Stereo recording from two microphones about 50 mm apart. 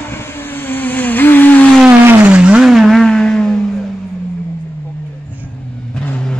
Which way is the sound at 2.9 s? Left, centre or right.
Centre.